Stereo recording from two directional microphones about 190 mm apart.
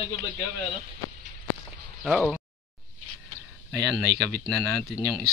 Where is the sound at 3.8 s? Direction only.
5° left (ahead or behind).